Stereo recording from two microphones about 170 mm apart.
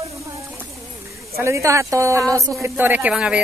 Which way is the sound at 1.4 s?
15° right (ahead or behind).